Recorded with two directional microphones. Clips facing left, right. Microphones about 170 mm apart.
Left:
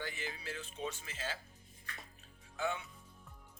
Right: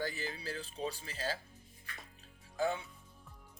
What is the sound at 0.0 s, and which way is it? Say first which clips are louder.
Speech: right 4 dB; 35° right (ahead or behind).